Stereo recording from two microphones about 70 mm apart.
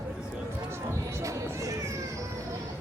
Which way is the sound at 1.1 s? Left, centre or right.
Right.